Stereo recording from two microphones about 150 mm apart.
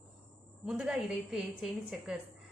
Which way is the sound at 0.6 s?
5° right (ahead or behind).